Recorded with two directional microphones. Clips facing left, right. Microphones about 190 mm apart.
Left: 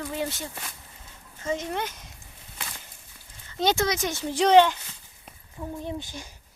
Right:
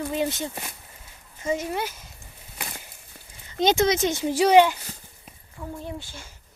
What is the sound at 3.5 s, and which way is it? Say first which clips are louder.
Speech: right 4 dB; 15° right (ahead or behind).